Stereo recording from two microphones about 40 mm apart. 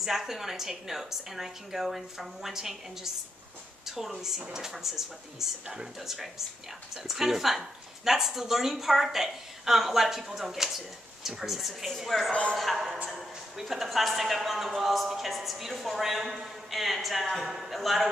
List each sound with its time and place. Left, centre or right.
0.0 s a man's voice: centre
12.3 s speech: left
12.7 s a man's voice: centre